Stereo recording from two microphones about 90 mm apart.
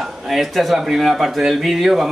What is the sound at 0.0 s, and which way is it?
Speech, centre (ahead or behind).